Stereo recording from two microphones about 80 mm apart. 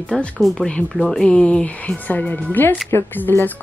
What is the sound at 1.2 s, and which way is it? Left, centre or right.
A woman's voice, centre.